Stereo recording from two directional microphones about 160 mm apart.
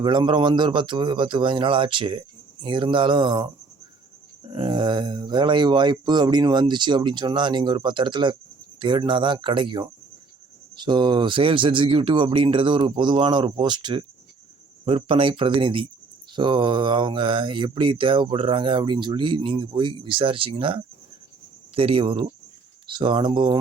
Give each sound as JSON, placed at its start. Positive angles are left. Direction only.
{"t": 0.0, "sound": "speech", "side_deg": -30}